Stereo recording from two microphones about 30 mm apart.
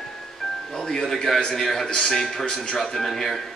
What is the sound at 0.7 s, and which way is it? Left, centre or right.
Speech, centre.